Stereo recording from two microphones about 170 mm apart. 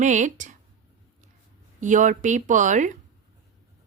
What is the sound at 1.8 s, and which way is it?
Speech, 50° right (ahead or behind).